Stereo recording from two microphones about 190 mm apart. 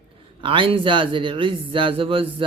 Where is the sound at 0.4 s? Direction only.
25° right (ahead or behind).